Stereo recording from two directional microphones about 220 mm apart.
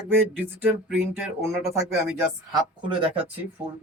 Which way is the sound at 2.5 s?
20° right (ahead or behind).